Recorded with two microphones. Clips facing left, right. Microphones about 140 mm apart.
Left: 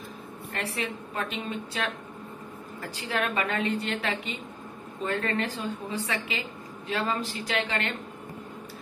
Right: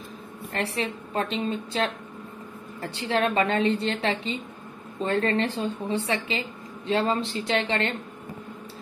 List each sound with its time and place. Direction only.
0.5 s a woman's voice: 30° right (ahead or behind)